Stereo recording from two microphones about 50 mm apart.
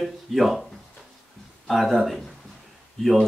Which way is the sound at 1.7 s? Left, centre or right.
Centre.